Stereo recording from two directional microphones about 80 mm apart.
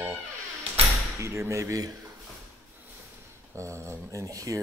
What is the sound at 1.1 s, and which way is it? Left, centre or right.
Speech, right.